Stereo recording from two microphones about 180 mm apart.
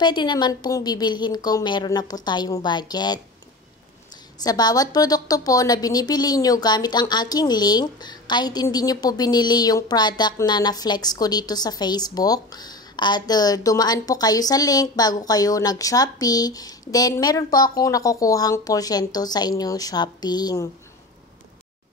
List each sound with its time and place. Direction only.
0.0 s a woman's voice: 25° left (ahead or behind)
4.4 s a woman's voice: 20° left (ahead or behind)